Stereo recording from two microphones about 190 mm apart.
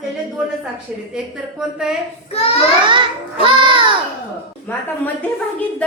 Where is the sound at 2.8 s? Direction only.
25° right (ahead or behind).